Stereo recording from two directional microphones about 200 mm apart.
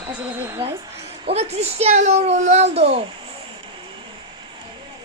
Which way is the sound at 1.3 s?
30° right (ahead or behind).